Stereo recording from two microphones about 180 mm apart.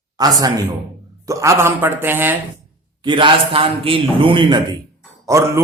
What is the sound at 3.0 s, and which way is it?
A man's voice, 25° right (ahead or behind).